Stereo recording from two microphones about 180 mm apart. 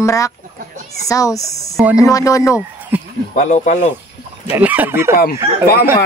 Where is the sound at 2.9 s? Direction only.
10° right (ahead or behind).